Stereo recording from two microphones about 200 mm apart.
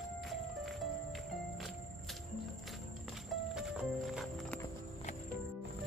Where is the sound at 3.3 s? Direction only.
5° right (ahead or behind).